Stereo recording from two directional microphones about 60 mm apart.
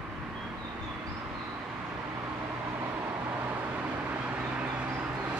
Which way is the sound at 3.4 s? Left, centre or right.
Right.